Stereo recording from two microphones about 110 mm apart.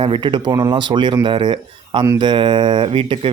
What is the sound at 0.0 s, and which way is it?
Speech, 50° right (ahead or behind).